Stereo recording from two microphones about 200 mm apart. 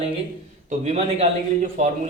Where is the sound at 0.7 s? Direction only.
30° right (ahead or behind).